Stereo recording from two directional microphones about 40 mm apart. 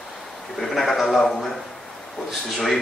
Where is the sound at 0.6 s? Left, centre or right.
Centre.